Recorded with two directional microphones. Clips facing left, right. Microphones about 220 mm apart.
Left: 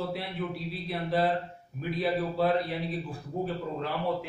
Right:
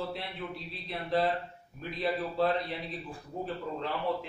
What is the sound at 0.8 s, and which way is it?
A man's voice, 5° left (ahead or behind).